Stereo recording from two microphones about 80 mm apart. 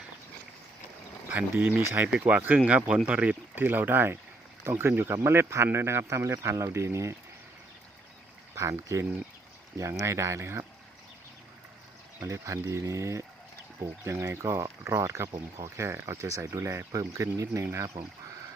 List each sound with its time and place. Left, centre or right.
1.3 s speech: right
8.5 s speech: right
12.3 s speech: right